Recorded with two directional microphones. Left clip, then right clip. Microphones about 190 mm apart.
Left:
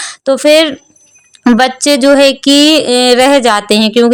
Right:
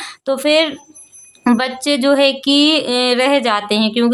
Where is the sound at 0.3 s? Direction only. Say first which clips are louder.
Left 7 dB; 30° left (ahead or behind).